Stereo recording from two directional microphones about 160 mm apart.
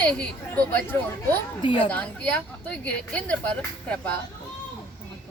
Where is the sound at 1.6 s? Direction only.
30° left (ahead or behind).